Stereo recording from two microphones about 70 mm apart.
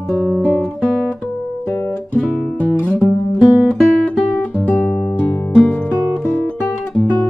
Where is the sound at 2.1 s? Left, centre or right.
Left.